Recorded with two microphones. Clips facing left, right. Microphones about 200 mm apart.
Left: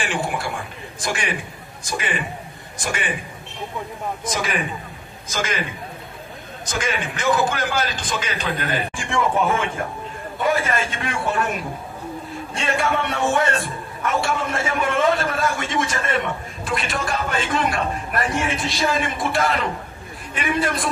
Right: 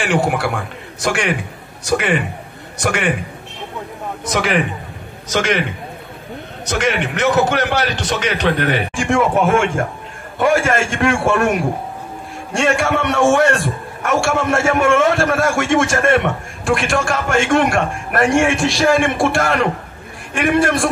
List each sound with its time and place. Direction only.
0.0 s a man's voice: 75° right (ahead or behind)
4.3 s a man's voice: 70° right (ahead or behind)